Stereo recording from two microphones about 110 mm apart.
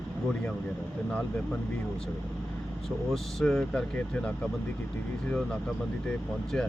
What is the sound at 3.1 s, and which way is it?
Speech, 5° left (ahead or behind).